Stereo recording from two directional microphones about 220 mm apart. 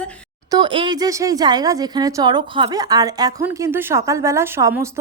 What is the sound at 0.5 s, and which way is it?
Speech, 20° right (ahead or behind).